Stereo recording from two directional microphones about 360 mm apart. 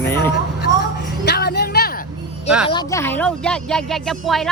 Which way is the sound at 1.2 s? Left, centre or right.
Left.